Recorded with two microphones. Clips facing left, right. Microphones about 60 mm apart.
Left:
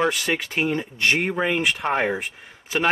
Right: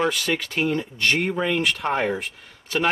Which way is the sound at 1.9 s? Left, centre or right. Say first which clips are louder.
Left 1 dB; left.